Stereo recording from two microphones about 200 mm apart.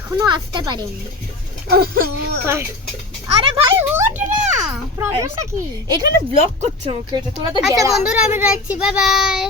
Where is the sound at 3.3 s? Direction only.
30° right (ahead or behind).